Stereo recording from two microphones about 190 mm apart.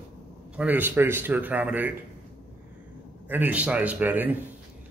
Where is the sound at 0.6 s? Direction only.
10° right (ahead or behind).